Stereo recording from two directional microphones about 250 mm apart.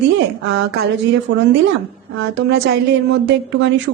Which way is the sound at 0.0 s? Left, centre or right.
Right.